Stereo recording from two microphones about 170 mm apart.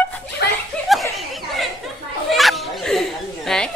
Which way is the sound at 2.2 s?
Centre (ahead or behind).